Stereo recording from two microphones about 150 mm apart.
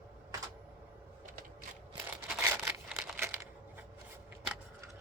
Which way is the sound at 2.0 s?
10° right (ahead or behind).